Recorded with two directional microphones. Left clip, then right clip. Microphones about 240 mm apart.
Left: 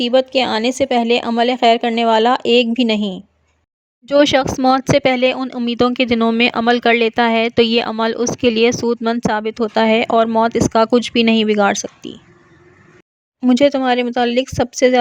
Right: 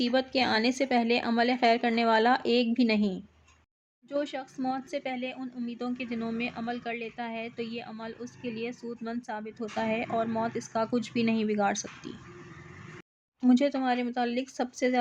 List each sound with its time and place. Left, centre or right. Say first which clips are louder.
0.0 s speech: left 13 dB; left
13.4 s speech: left 13 dB; left